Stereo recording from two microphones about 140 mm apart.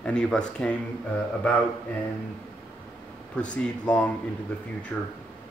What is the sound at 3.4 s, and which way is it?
Speech, 10° left (ahead or behind).